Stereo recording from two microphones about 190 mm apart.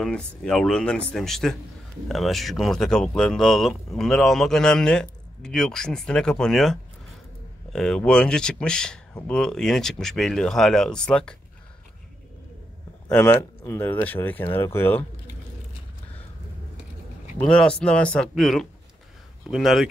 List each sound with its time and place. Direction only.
0.0 s speech: 5° left (ahead or behind)
13.2 s speech: 15° left (ahead or behind)
17.4 s speech: 5° left (ahead or behind)